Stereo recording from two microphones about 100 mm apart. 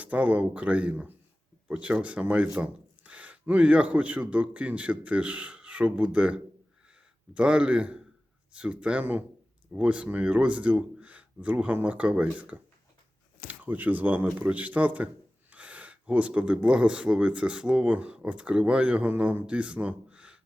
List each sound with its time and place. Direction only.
0.0 s speech: 15° right (ahead or behind)